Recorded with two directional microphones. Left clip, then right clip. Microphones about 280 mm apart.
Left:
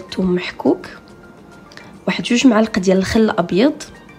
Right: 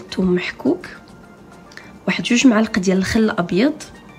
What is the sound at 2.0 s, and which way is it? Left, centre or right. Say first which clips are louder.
Speech: left 1 dB; centre.